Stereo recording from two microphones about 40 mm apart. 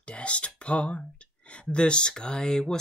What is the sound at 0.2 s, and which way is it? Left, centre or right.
Speech, left.